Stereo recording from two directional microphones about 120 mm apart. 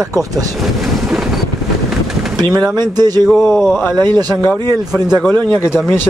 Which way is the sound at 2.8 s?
35° right (ahead or behind).